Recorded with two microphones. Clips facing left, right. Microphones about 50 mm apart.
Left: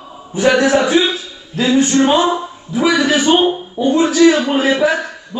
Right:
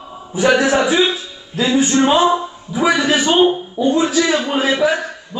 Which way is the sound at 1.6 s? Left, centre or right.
Centre.